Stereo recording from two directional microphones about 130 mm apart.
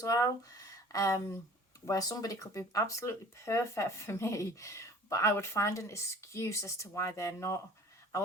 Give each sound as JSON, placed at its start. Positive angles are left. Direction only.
{"t": 0.0, "sound": "speech", "side_deg": 25}